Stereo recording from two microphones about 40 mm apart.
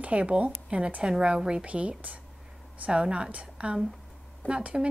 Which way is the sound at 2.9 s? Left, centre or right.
Right.